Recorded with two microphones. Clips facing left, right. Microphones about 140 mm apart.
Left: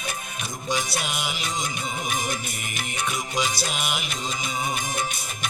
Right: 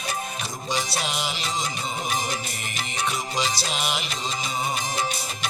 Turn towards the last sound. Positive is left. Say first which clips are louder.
# left 1 dB
turn(degrees=50)  # may be behind; listen again after turning